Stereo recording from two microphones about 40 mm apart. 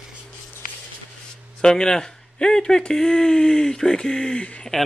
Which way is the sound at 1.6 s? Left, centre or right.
Centre.